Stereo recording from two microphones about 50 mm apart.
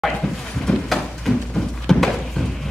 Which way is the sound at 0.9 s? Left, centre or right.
Centre.